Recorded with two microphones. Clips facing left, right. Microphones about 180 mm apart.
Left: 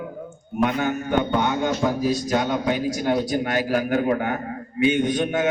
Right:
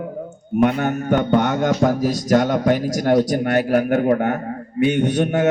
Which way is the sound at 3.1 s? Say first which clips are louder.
Right 7 dB; 70° right (ahead or behind).